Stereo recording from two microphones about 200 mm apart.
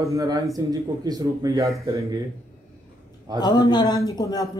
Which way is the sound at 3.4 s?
20° left (ahead or behind).